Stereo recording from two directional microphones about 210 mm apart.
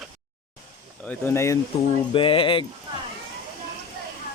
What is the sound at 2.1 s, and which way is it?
Speech, 25° left (ahead or behind).